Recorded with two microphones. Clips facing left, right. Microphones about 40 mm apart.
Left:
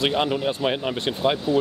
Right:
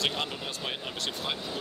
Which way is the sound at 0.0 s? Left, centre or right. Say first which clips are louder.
Left 10 dB; left.